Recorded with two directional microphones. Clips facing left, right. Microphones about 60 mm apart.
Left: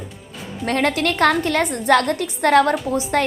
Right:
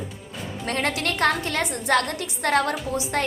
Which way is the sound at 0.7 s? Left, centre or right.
Left.